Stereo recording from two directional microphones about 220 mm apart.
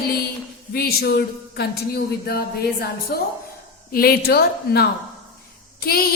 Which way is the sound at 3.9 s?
45° left (ahead or behind).